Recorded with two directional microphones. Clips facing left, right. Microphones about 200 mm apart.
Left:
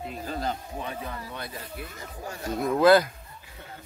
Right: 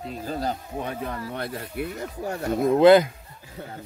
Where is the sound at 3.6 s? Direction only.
45° right (ahead or behind).